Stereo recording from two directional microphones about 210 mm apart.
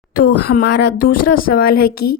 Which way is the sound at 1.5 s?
45° left (ahead or behind).